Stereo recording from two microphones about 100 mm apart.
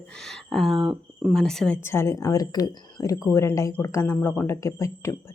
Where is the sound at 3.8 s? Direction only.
30° left (ahead or behind).